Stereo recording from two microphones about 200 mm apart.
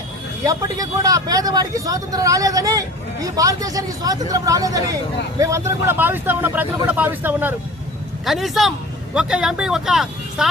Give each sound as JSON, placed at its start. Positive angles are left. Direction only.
{"t": 0.4, "sound": "speech", "side_deg": -20}